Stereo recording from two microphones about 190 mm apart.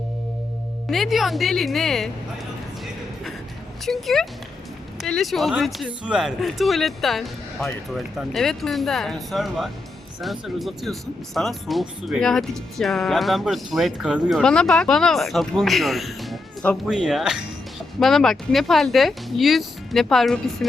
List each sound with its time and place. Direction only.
0.9 s speech: centre (ahead or behind)
3.8 s speech: centre (ahead or behind)